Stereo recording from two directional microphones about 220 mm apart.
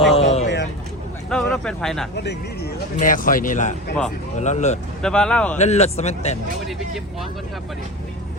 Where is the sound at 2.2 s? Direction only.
50° left (ahead or behind).